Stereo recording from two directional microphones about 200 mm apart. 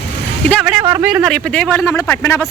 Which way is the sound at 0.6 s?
10° right (ahead or behind).